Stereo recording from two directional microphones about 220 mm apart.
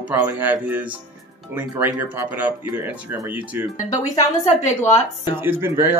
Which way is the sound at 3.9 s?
30° left (ahead or behind).